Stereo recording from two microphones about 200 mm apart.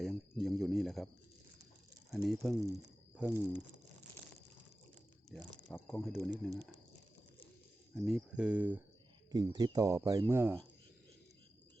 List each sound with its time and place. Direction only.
0.0 s a sound: centre (ahead or behind)
2.0 s speech: centre (ahead or behind)
5.3 s speech: 5° left (ahead or behind)
7.9 s speech: centre (ahead or behind)
9.3 s speech: 20° right (ahead or behind)